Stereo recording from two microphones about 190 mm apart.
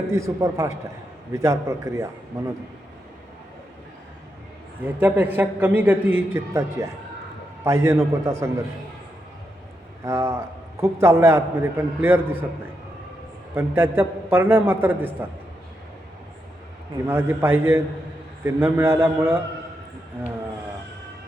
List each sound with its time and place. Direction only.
0.1 s a man's voice: 15° right (ahead or behind)
4.8 s a man's voice: 10° right (ahead or behind)
10.0 s a man's voice: 15° right (ahead or behind)
13.5 s a man's voice: 10° right (ahead or behind)
17.1 s a man's voice: 10° right (ahead or behind)